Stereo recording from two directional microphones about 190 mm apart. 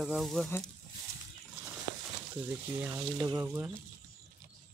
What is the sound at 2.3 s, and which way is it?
Speech, 10° right (ahead or behind).